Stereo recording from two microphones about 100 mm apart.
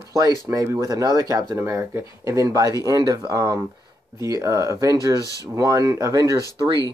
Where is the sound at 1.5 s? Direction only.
25° right (ahead or behind).